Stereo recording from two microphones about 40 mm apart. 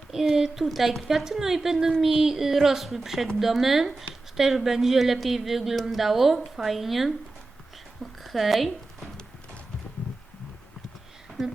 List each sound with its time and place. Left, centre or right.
0.3 s a woman's voice: centre
1.2 s a woman's voice: centre
8.2 s speech: centre